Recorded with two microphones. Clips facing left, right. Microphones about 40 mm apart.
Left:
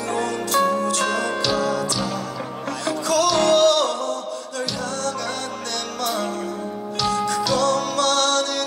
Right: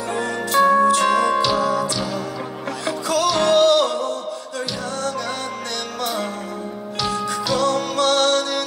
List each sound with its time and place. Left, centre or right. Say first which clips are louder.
0.1 s music: right 1 dB; centre
7.0 s music: left 2 dB; centre